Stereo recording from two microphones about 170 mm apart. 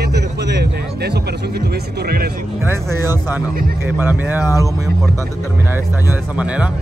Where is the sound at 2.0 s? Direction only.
65° right (ahead or behind).